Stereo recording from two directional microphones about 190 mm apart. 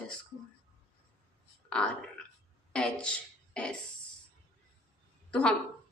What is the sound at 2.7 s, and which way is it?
Speech, 5° left (ahead or behind).